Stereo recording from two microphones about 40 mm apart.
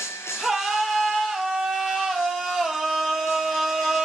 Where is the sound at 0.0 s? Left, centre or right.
Left.